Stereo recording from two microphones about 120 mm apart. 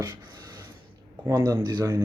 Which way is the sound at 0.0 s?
35° right (ahead or behind).